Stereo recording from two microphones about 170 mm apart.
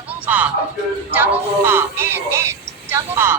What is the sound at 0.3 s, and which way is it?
Speech, 10° right (ahead or behind).